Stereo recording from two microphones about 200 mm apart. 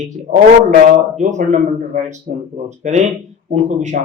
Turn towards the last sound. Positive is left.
turn(degrees=-40)  # may be behind; listen again after turning